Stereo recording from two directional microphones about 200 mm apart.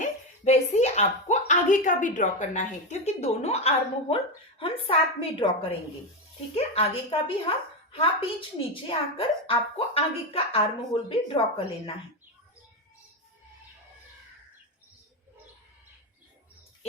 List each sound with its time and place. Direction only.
0.0 s speech: 35° left (ahead or behind)
6.7 s speech: 25° left (ahead or behind)